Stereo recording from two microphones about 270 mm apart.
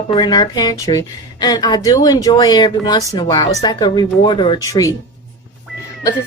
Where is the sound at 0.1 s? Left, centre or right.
Centre.